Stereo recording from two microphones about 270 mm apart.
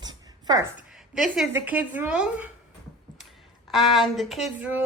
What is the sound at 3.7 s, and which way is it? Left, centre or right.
A woman's voice, centre.